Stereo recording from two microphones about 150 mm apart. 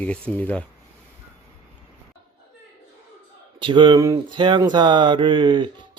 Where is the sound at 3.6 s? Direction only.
35° right (ahead or behind).